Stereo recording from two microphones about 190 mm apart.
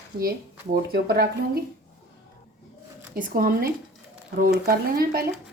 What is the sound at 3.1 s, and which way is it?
Speech, 50° right (ahead or behind).